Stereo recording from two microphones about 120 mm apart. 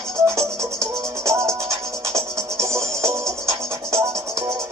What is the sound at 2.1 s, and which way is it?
Music, 25° right (ahead or behind).